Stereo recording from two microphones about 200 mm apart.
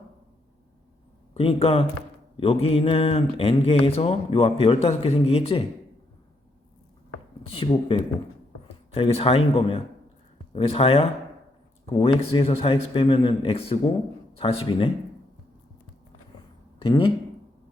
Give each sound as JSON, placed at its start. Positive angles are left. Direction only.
{"t": 1.3, "sound": "speech", "side_deg": 30}
{"t": 7.5, "sound": "speech", "side_deg": 25}
{"t": 16.8, "sound": "speech", "side_deg": 25}